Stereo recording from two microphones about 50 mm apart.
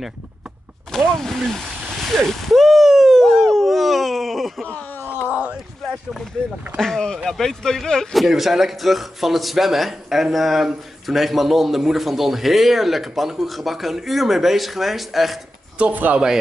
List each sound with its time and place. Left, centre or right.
0.9 s speech: centre
2.0 s a sound: centre
4.9 s groan: left
6.8 s a man's voice: centre
15.8 s speech: right